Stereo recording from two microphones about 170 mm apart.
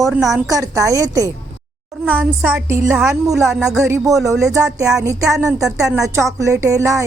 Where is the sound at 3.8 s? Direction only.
20° right (ahead or behind).